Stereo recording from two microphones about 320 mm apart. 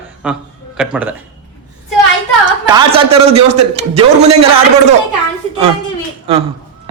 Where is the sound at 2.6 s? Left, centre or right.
Centre.